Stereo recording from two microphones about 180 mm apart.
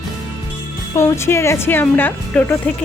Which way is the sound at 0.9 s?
15° left (ahead or behind).